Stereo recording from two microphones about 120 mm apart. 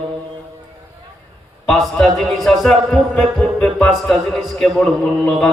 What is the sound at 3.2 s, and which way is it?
Music, 15° left (ahead or behind).